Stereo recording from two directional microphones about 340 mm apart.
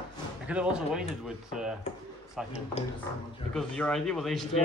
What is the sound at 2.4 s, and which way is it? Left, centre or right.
Speech, centre.